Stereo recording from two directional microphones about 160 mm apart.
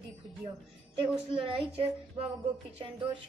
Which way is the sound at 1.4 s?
35° right (ahead or behind).